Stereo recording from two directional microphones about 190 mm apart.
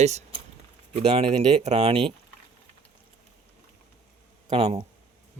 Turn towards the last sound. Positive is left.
turn(degrees=-30)  # may be behind; listen again after turning